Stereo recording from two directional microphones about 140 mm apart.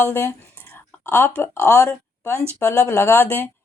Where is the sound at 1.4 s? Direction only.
20° left (ahead or behind).